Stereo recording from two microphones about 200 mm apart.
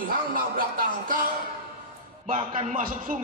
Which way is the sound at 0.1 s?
45° right (ahead or behind).